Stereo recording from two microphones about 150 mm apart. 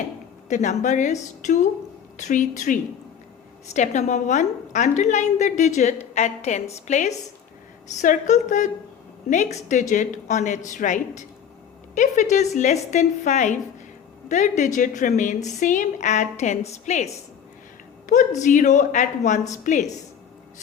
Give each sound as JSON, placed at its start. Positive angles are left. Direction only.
{"t": 0.4, "sound": "a woman's voice", "side_deg": 50}
{"t": 3.8, "sound": "a woman's voice", "side_deg": 50}